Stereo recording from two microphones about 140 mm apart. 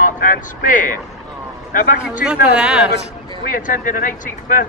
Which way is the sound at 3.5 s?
70° left (ahead or behind).